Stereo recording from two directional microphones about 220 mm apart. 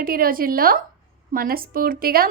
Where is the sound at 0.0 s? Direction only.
40° right (ahead or behind).